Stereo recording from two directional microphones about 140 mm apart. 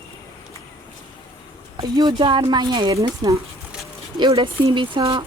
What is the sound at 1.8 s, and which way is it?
Speech, 30° right (ahead or behind).